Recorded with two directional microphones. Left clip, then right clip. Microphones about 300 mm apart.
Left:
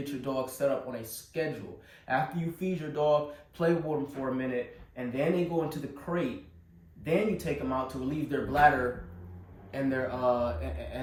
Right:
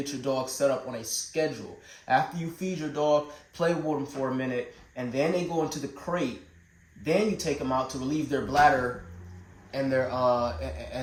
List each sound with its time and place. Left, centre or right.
0.0 s speech: right
9.7 s speech: right